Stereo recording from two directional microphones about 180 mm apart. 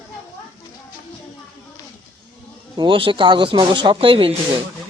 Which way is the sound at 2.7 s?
30° right (ahead or behind).